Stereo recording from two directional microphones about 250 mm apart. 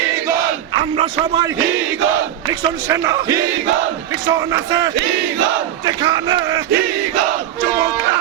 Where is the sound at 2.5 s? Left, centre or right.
Centre.